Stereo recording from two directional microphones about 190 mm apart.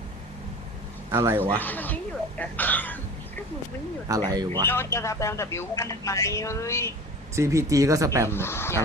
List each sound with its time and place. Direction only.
1.1 s speech: 15° right (ahead or behind)
1.5 s speech: 10° left (ahead or behind)
2.4 s a sound: 10° left (ahead or behind)
4.1 s speech: 15° right (ahead or behind)
4.6 s speech: 10° left (ahead or behind)
7.3 s speech: 15° right (ahead or behind)
8.3 s speech: 10° left (ahead or behind)